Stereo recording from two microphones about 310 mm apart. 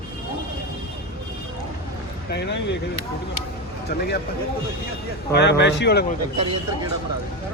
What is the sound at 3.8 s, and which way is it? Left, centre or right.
Speech, left.